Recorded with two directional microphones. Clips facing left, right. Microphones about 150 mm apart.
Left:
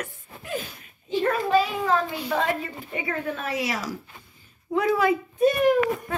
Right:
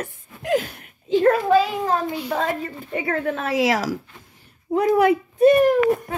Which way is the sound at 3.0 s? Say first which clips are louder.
Right 5 dB; 65° right (ahead or behind).